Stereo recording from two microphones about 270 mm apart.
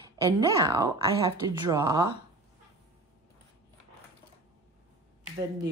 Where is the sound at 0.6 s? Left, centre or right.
Centre.